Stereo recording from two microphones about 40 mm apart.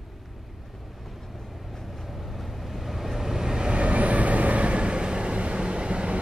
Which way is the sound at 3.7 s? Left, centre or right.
Right.